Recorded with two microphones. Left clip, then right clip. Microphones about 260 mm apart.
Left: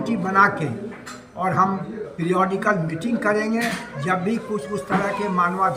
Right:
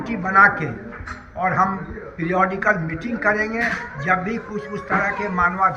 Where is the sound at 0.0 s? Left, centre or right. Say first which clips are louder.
Right 3 dB; centre.